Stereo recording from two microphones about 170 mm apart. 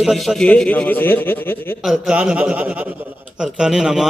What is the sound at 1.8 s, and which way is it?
A man's voice, centre (ahead or behind).